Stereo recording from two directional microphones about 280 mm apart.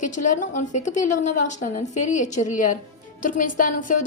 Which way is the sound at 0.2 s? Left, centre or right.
Left.